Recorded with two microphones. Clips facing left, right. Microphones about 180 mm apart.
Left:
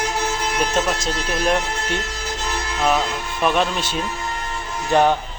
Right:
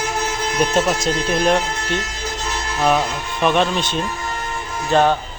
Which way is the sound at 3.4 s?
5° left (ahead or behind).